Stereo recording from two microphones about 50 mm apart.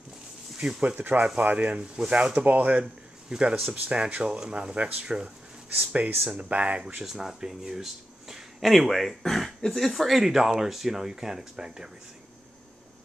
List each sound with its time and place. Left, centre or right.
0.6 s speech: centre
2.8 s a man's voice: centre
3.8 s speech: right
5.8 s speech: right
7.0 s speech: centre